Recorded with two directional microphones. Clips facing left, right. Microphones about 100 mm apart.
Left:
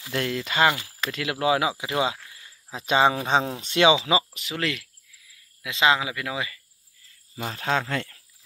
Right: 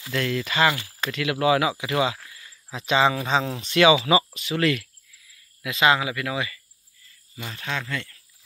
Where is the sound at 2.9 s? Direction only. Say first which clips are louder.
Even; 35° left (ahead or behind).